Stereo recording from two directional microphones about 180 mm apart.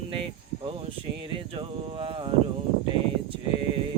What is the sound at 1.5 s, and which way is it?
Speech, 30° right (ahead or behind).